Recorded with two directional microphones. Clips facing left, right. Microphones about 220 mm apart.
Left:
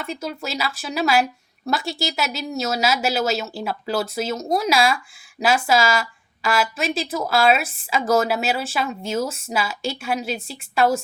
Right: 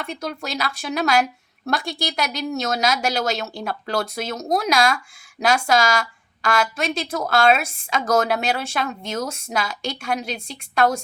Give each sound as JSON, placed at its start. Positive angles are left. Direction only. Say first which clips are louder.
{"t": 0.0, "sound": "a woman's voice", "louder": "even", "side_deg": 5}